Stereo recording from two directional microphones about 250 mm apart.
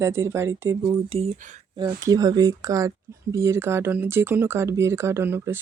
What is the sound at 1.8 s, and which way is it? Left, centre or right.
Speech, centre.